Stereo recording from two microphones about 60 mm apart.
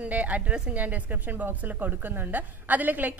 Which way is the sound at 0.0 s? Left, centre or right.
Right.